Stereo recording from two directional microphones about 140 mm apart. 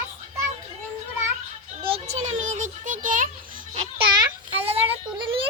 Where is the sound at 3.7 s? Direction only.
35° right (ahead or behind).